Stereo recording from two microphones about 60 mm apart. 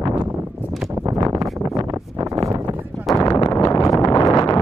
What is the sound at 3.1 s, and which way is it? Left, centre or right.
Wind noise, left.